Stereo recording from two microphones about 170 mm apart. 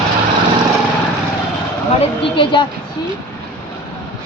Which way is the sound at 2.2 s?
30° left (ahead or behind).